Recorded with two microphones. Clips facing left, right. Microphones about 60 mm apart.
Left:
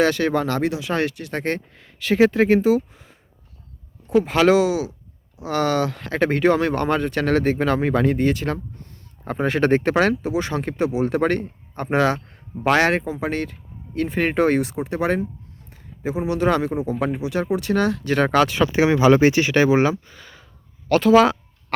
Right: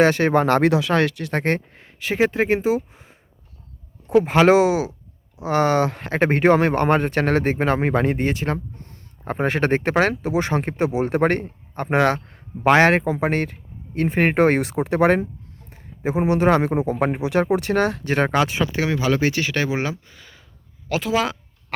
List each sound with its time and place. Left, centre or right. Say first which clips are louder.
0.0 s speech: right 3 dB; right
0.4 s speech: right 5 dB; right
0.7 s speech: right 4 dB; right
2.0 s speech: left 3 dB; centre
9.2 s speech: left 1 dB; right
15.7 s speech: right 3 dB; right
18.3 s speech: left 2 dB; centre
18.7 s speech: left 6 dB; centre
19.7 s speech: left 7 dB; centre